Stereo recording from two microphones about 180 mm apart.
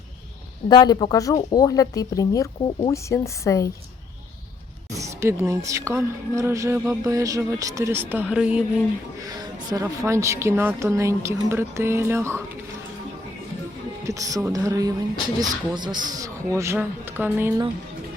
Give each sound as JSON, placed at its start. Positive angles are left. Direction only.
{"t": 0.7, "sound": "speech", "side_deg": 25}
{"t": 4.9, "sound": "speech", "side_deg": -15}
{"t": 9.6, "sound": "speech", "side_deg": -15}
{"t": 14.0, "sound": "speech", "side_deg": -20}